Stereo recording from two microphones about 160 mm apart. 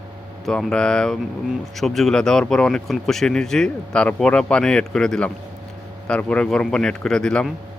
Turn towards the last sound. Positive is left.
turn(degrees=5)  # may be behind; listen again after turning